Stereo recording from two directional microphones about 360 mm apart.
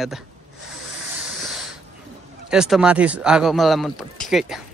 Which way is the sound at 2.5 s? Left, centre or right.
Centre.